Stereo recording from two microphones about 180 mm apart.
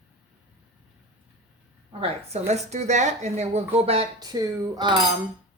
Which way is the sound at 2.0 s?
35° right (ahead or behind).